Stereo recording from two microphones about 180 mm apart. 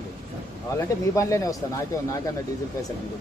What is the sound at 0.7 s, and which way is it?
Speech, 15° left (ahead or behind).